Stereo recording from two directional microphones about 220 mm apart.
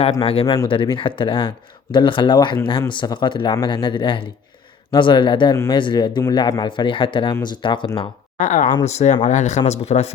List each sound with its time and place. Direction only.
0.0 s speech: 25° left (ahead or behind)
8.4 s speech: 35° left (ahead or behind)